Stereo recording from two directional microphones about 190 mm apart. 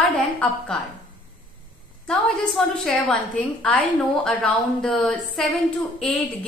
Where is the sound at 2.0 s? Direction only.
Centre (ahead or behind).